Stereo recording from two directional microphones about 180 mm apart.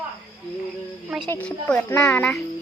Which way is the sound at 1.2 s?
10° left (ahead or behind).